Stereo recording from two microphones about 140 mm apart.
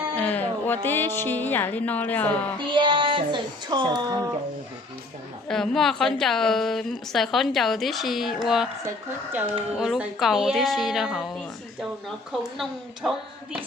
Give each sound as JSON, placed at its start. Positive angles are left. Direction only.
{"t": 0.2, "sound": "speech", "side_deg": 10}
{"t": 2.6, "sound": "speech", "side_deg": -35}
{"t": 5.5, "sound": "a woman's voice", "side_deg": 5}
{"t": 9.7, "sound": "a woman's voice", "side_deg": -5}